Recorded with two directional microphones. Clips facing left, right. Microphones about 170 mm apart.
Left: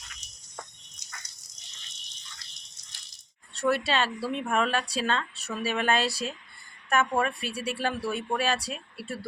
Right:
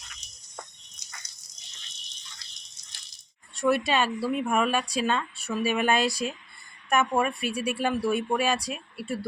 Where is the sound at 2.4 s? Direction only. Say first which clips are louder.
Even; 55° left (ahead or behind).